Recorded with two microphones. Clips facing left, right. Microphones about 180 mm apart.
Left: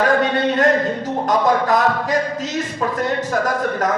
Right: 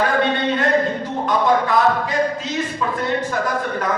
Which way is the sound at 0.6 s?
45° left (ahead or behind).